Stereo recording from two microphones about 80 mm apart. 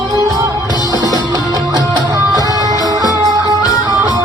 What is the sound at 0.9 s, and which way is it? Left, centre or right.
Music, right.